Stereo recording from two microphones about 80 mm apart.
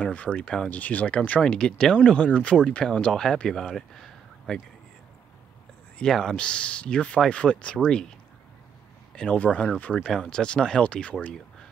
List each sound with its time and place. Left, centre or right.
0.0 s speech: centre
5.9 s speech: centre
9.1 s speech: centre
10.0 s speech: centre